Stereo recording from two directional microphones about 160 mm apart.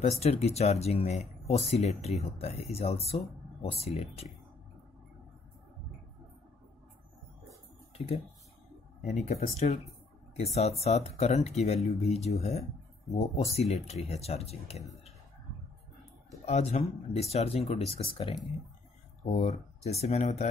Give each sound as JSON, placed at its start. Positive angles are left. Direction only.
{"t": 0.2, "sound": "speech", "side_deg": 40}
{"t": 9.0, "sound": "speech", "side_deg": 45}
{"t": 16.4, "sound": "speech", "side_deg": 40}